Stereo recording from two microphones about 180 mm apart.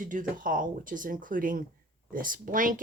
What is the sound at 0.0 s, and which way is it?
Speech, 45° right (ahead or behind).